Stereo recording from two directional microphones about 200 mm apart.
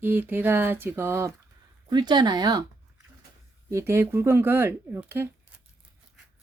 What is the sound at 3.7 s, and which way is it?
Speech, 15° right (ahead or behind).